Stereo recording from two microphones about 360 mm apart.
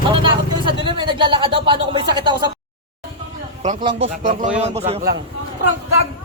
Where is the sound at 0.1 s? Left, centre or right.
Centre.